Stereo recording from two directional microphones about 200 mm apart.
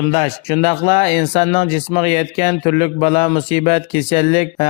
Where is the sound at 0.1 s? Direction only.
30° left (ahead or behind).